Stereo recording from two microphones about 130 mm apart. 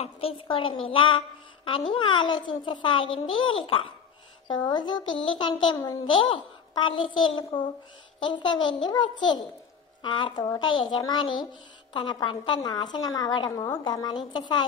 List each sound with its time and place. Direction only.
0.0 s a woman's voice: 45° left (ahead or behind)